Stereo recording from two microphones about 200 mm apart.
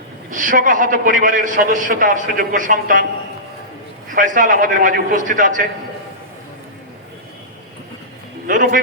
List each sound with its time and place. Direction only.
0.3 s a man's voice: 40° right (ahead or behind)
4.1 s a man's voice: 40° right (ahead or behind)
8.4 s a man's voice: 40° right (ahead or behind)